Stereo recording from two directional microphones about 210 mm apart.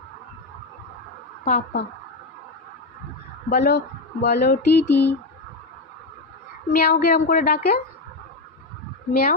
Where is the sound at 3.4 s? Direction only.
50° left (ahead or behind).